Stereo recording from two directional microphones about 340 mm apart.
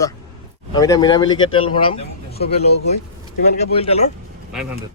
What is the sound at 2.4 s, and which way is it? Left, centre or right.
Speech, left.